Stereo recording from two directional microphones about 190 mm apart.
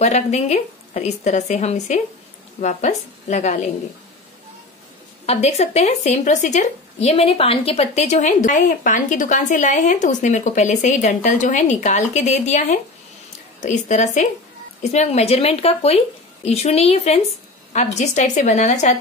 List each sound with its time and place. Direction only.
0.0 s speech: 35° left (ahead or behind)
5.2 s speech: 35° left (ahead or behind)